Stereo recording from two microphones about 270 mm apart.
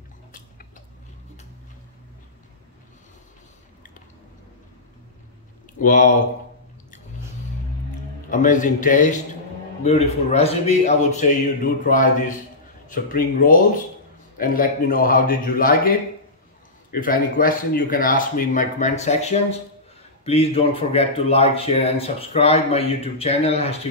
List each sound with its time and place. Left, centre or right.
5.8 s speech: left
8.3 s speech: left